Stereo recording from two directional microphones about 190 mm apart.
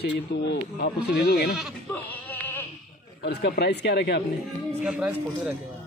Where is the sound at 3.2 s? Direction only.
65° left (ahead or behind).